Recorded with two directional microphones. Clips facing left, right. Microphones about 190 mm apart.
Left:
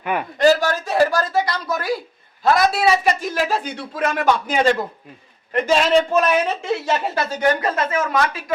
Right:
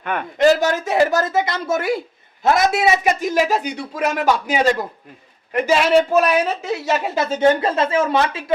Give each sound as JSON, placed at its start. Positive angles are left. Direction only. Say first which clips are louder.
{"t": 0.0, "sound": "a man's voice", "louder": "left 1 dB", "side_deg": 10}
{"t": 0.3, "sound": "a man's voice", "louder": "right 2 dB", "side_deg": -20}
{"t": 7.2, "sound": "speech", "louder": "right 7 dB", "side_deg": -25}